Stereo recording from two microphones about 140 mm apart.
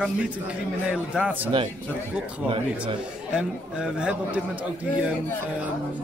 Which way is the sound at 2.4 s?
40° right (ahead or behind).